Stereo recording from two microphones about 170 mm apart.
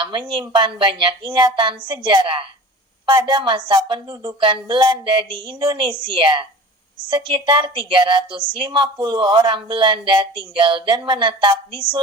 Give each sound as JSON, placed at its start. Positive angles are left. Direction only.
{"t": 0.0, "sound": "a woman's voice", "side_deg": -30}